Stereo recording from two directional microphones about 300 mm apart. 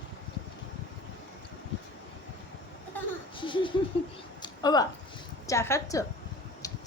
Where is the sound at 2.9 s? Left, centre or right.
Centre.